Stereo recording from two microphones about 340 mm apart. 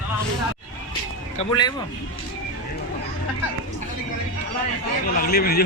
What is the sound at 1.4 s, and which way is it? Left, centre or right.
Speech, centre.